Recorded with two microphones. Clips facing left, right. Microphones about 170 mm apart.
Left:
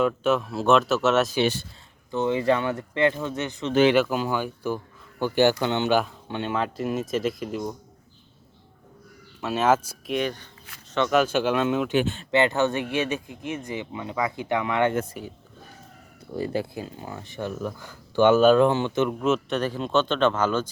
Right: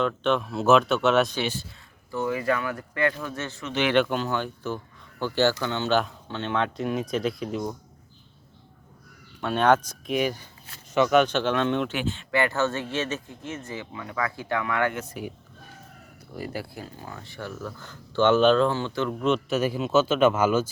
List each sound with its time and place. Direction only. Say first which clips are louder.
0.0 s speech: left 2 dB; 5° left (ahead or behind)
2.0 s speech: left 4 dB; 25° left (ahead or behind)
3.9 s speech: left 1 dB; 5° left (ahead or behind)
9.4 s speech: right 1 dB; 5° left (ahead or behind)
10.1 s speech: right 1 dB; 5° right (ahead or behind)
12.3 s speech: left 3 dB; 20° left (ahead or behind)
15.2 s speech: right 2 dB; centre (ahead or behind)
16.3 s speech: left 6 dB; 25° left (ahead or behind); by 19.5 s 5° left (ahead or behind)
19.5 s speech: right 2 dB; 5° right (ahead or behind)